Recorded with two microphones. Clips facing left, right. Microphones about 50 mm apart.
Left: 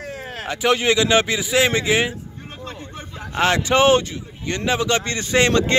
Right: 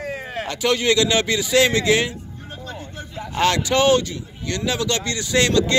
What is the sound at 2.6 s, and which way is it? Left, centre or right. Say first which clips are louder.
Vehicle: even; left.